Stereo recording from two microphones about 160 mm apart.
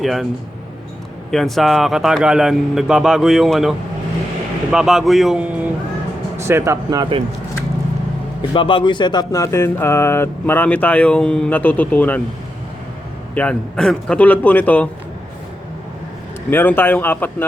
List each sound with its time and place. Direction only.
0.0 s speech: centre (ahead or behind)
1.3 s speech: centre (ahead or behind); by 7.2 s 25° right (ahead or behind)
8.4 s speech: 30° left (ahead or behind); by 12.2 s 10° left (ahead or behind)
13.3 s speech: 10° left (ahead or behind)
16.5 s speech: 10° left (ahead or behind)